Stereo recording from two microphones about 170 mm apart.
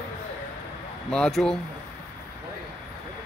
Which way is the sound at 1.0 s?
5° left (ahead or behind).